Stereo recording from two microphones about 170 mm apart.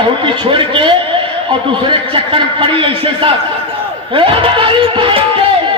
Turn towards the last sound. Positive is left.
turn(degrees=-30)  # may be behind; listen again after turning